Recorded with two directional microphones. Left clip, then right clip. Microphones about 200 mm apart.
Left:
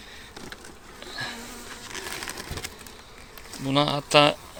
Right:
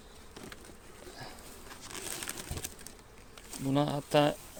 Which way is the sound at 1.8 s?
55° right (ahead or behind).